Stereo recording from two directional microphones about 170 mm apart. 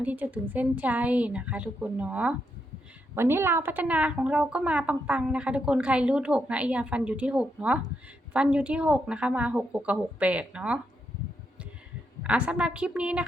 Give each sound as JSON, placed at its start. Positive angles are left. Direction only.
{"t": 0.0, "sound": "speech", "side_deg": -10}
{"t": 12.2, "sound": "speech", "side_deg": -5}